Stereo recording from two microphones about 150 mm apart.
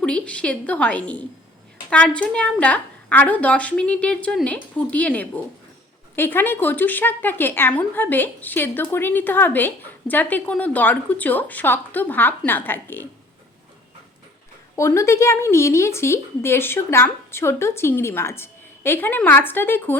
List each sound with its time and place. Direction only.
0.0 s a woman's voice: 5° left (ahead or behind)
14.8 s a woman's voice: 20° left (ahead or behind)